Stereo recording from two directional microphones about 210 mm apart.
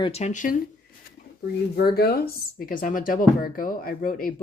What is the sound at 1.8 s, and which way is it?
Speech, 45° left (ahead or behind).